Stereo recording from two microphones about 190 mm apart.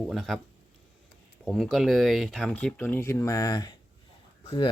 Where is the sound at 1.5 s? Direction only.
Centre (ahead or behind).